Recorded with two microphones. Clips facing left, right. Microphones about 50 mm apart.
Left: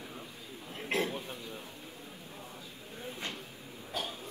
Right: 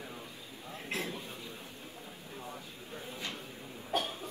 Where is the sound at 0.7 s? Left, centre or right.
Left.